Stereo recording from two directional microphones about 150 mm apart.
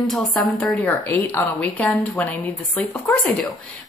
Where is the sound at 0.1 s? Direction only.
Centre (ahead or behind).